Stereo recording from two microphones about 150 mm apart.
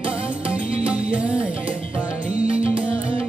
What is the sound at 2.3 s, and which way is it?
Music, 45° right (ahead or behind).